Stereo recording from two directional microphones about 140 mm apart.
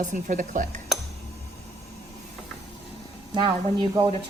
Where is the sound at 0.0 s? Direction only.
65° right (ahead or behind).